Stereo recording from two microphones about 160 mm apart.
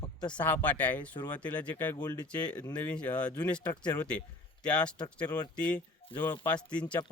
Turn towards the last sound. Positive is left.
turn(degrees=10)  # may be behind; listen again after turning